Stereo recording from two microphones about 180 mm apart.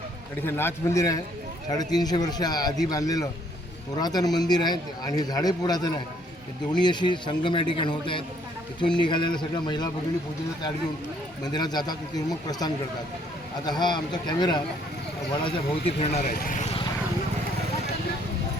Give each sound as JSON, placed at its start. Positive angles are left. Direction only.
{"t": 0.4, "sound": "a man's voice", "side_deg": 10}
{"t": 11.4, "sound": "a man's voice", "side_deg": 20}
{"t": 16.2, "sound": "speech", "side_deg": 55}